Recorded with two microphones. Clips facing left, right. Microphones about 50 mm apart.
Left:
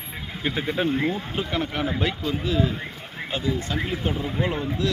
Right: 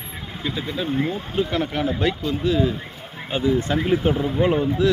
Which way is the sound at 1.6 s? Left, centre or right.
Centre.